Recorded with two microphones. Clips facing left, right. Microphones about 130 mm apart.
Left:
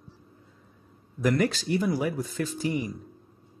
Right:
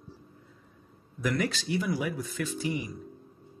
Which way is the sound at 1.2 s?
40° left (ahead or behind).